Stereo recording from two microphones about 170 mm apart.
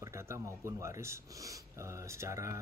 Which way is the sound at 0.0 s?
15° right (ahead or behind).